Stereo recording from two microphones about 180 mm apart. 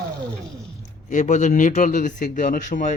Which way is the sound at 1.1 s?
45° left (ahead or behind).